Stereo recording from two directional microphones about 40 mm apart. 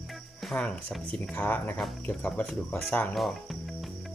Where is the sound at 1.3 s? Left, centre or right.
Left.